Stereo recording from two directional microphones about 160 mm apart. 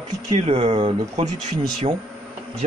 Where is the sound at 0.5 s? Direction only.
35° right (ahead or behind).